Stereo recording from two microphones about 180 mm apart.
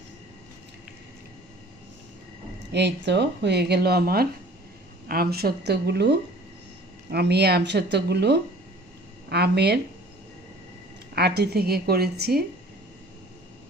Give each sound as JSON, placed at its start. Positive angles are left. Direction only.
{"t": 2.7, "sound": "speech", "side_deg": -70}
{"t": 11.1, "sound": "speech", "side_deg": -60}